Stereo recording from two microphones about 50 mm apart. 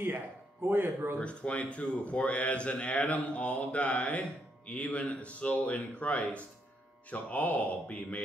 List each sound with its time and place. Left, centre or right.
0.7 s speech: right
1.1 s a man's voice: left